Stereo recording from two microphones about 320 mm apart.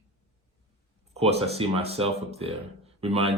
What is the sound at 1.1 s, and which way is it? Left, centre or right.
Speech, centre.